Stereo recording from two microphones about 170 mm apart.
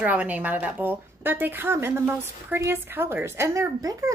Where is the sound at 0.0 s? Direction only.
10° right (ahead or behind).